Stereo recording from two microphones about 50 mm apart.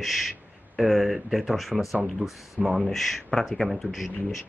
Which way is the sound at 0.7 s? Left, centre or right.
Centre.